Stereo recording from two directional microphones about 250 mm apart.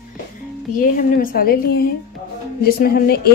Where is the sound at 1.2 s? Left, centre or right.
Left.